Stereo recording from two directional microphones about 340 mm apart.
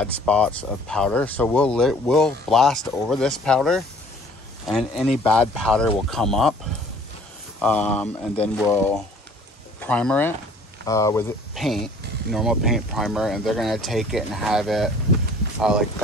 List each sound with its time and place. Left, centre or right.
0.0 s speech: centre
7.6 s speech: centre